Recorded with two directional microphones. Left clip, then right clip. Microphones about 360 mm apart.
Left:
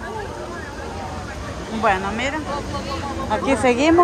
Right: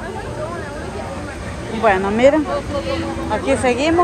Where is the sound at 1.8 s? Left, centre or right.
Centre.